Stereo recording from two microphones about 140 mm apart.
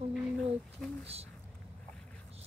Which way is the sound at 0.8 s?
5° left (ahead or behind).